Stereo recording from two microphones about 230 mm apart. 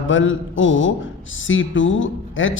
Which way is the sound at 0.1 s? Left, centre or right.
Left.